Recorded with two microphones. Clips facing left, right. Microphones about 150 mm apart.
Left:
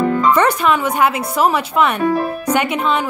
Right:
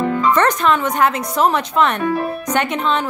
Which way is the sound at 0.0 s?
40° left (ahead or behind).